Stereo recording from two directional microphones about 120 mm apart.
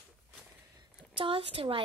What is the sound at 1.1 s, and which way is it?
Speech, 50° right (ahead or behind).